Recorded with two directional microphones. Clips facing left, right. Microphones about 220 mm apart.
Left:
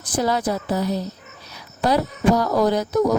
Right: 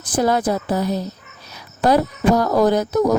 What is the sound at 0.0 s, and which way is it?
Speech, 50° right (ahead or behind).